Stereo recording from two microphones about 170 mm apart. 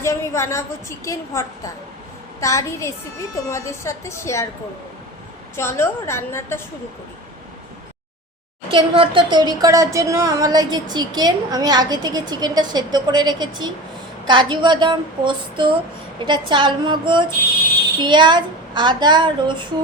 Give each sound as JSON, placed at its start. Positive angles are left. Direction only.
{"t": 0.0, "sound": "a woman's voice", "side_deg": 15}
{"t": 5.5, "sound": "a woman's voice", "side_deg": 15}
{"t": 8.7, "sound": "a woman's voice", "side_deg": -30}